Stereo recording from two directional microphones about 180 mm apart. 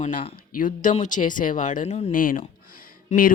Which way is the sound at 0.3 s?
50° left (ahead or behind).